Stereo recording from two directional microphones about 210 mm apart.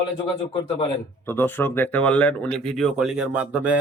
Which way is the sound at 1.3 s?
10° left (ahead or behind).